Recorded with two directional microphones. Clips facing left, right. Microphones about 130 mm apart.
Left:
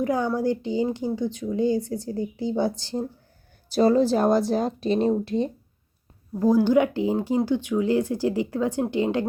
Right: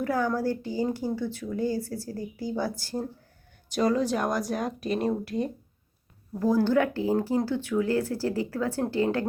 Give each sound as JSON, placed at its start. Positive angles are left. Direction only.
{"t": 0.0, "sound": "speech", "side_deg": 20}